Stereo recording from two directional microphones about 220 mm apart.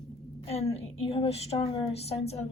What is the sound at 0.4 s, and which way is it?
A woman's voice, 25° left (ahead or behind).